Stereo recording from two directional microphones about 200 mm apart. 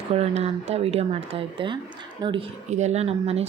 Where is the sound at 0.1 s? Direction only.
30° right (ahead or behind).